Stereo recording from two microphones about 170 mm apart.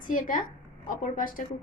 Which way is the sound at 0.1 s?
50° left (ahead or behind).